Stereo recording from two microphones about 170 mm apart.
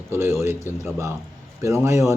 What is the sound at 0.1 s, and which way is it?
Speech, 15° right (ahead or behind).